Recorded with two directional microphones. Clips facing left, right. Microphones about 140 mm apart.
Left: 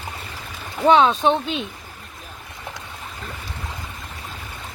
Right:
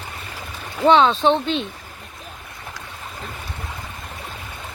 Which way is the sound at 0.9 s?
5° left (ahead or behind).